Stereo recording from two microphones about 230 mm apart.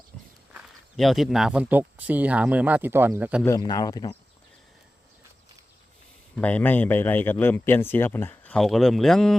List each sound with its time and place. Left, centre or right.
0.1 s walk: centre
0.5 s speech: centre
3.4 s speech: centre
6.3 s speech: centre